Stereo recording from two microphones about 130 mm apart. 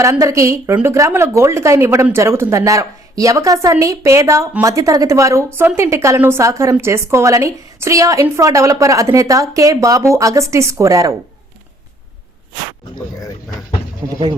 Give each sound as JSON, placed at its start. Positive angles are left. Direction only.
{"t": 0.0, "sound": "a woman's voice", "side_deg": -25}
{"t": 14.1, "sound": "a woman's voice", "side_deg": -30}